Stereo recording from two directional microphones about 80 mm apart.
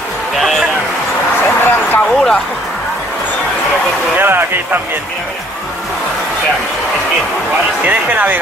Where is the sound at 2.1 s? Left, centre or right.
Centre.